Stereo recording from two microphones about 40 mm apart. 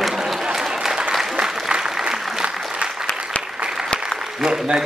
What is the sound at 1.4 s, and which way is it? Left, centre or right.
Applause, centre.